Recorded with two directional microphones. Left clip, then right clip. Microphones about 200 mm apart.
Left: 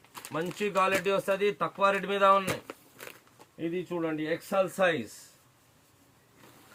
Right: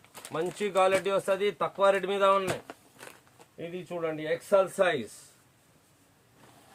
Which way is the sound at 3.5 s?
25° right (ahead or behind).